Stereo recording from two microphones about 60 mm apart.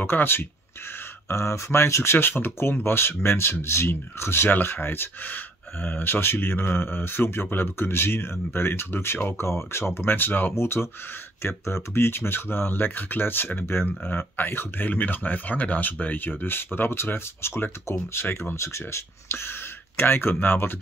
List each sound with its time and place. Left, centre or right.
0.0 s speech: left
1.3 s speech: left
2.1 s speech: left